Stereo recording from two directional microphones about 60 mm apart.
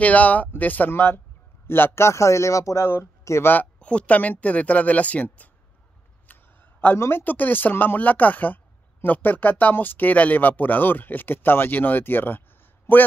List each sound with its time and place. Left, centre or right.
0.0 s speech: left
2.0 s speech: left
2.9 s speech: left
3.8 s speech: left
6.2 s a sound: left
7.0 s speech: left